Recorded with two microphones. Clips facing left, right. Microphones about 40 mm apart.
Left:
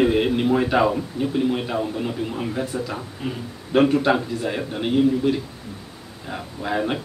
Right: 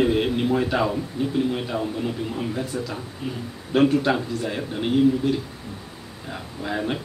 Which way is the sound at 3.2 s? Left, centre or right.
Left.